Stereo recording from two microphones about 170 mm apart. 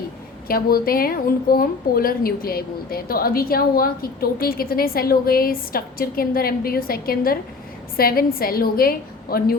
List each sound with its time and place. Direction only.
0.4 s a woman's voice: 60° left (ahead or behind)